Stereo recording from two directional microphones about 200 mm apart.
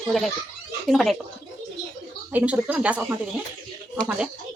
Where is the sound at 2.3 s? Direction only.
5° right (ahead or behind).